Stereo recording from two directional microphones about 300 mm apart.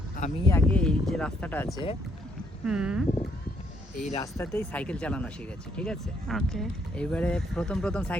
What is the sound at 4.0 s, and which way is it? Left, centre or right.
Speech, left.